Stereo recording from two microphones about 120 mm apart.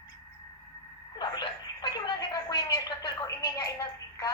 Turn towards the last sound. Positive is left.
turn(degrees=30)  # may be behind; listen again after turning